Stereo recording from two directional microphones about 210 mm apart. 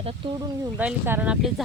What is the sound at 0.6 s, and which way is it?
Speech, 10° right (ahead or behind).